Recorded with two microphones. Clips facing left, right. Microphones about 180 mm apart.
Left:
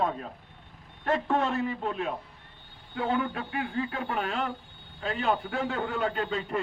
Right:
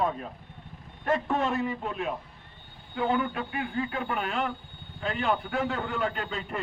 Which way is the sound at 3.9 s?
30° left (ahead or behind).